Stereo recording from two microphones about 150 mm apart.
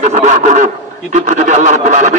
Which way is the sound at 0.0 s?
55° right (ahead or behind).